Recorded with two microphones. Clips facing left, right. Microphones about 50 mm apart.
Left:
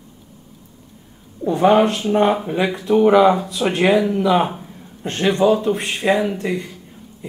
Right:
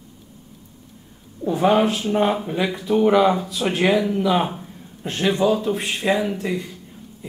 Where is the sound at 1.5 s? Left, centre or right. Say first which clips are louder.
Left 3 dB; centre.